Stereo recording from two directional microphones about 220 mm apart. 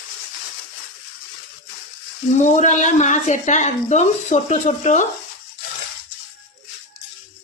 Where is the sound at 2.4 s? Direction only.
35° left (ahead or behind).